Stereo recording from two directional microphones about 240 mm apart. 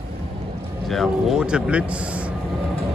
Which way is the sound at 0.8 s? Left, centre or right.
Centre.